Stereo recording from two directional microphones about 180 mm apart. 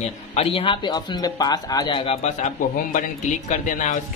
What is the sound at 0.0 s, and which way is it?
Speech, 35° left (ahead or behind).